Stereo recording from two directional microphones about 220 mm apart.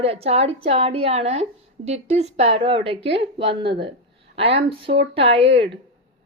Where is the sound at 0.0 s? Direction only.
25° right (ahead or behind).